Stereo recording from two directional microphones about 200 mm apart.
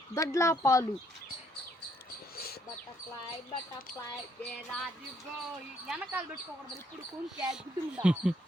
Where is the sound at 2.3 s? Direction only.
50° left (ahead or behind).